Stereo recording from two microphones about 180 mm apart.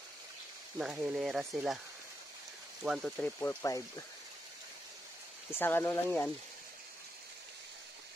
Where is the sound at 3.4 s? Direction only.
15° left (ahead or behind).